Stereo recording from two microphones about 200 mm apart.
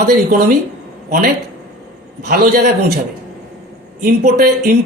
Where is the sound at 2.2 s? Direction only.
50° right (ahead or behind).